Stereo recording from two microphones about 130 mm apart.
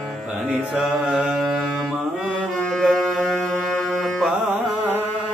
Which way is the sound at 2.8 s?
Centre (ahead or behind).